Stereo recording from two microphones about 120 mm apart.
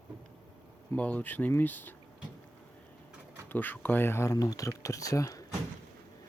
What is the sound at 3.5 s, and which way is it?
Speech, 15° left (ahead or behind).